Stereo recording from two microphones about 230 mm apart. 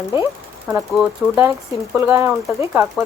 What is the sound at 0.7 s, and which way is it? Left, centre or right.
Speech, centre.